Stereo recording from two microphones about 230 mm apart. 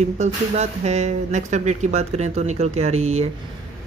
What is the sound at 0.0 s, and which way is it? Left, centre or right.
Speech, right.